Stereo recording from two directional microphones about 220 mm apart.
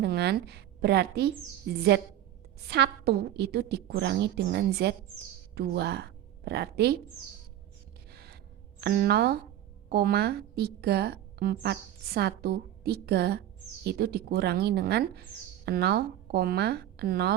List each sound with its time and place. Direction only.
0.0 s a woman's voice: 50° right (ahead or behind)
8.1 s gasp: 45° right (ahead or behind)
8.8 s a woman's voice: 45° right (ahead or behind)